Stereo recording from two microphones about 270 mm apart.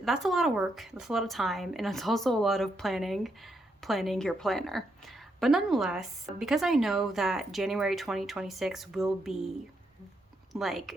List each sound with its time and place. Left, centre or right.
0.0 s speech: centre
10.5 s speech: centre